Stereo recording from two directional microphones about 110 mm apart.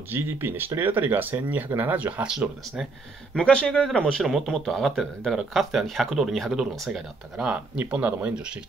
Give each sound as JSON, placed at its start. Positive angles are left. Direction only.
{"t": 0.1, "sound": "speech", "side_deg": -20}
{"t": 3.6, "sound": "speech", "side_deg": 5}